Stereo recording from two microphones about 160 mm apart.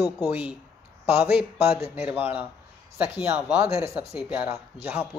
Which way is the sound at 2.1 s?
10° right (ahead or behind).